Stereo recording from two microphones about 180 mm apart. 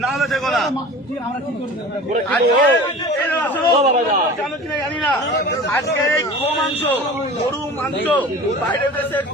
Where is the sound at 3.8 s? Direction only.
40° right (ahead or behind).